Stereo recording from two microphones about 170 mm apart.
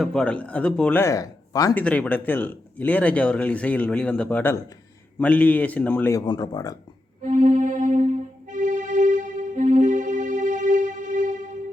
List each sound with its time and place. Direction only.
0.0 s speech: 5° left (ahead or behind); by 1.7 s 20° left (ahead or behind)
1.7 s speech: 5° left (ahead or behind)
6.2 s speech: 25° left (ahead or behind)
7.3 s music: 50° right (ahead or behind)